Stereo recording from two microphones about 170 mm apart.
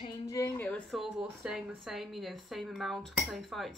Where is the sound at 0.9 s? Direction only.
5° right (ahead or behind).